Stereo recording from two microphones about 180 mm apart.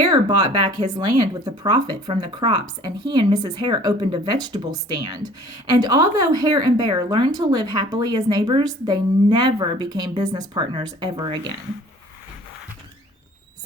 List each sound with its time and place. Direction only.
0.0 s speech: 20° right (ahead or behind)